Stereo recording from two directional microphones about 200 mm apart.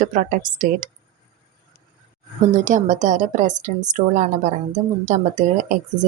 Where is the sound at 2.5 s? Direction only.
40° right (ahead or behind).